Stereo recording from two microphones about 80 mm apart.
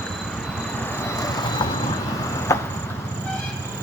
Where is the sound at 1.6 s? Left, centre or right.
Left.